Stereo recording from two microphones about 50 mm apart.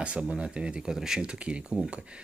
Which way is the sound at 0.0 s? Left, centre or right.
Right.